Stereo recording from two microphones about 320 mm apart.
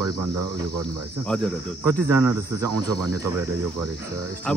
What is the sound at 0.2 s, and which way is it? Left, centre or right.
Speech, right.